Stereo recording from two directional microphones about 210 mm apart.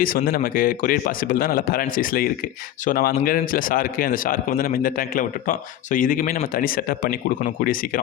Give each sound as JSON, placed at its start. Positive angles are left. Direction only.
{"t": 0.0, "sound": "a man's voice", "side_deg": 45}